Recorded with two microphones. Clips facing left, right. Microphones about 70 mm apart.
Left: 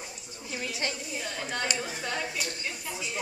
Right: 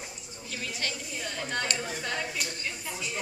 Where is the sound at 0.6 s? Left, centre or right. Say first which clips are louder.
Left 2 dB; left.